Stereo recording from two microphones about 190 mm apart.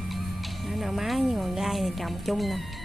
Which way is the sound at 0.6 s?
Centre (ahead or behind).